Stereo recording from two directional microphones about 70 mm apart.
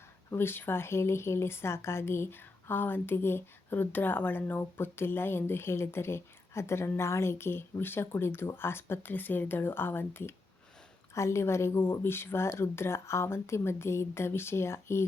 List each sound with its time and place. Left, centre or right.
0.3 s speech: left